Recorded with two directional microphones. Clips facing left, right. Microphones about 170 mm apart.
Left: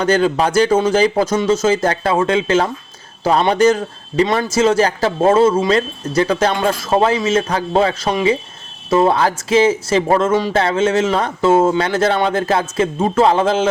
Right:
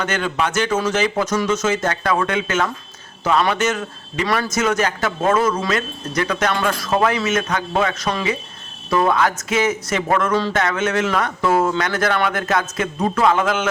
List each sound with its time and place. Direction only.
0.0 s a man's voice: 35° left (ahead or behind)